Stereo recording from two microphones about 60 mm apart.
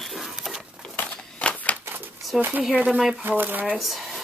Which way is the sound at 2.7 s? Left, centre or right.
Right.